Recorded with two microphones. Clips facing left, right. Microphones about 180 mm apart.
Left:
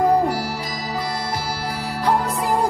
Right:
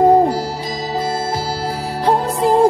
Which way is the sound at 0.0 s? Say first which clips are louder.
Right 6 dB; 25° right (ahead or behind).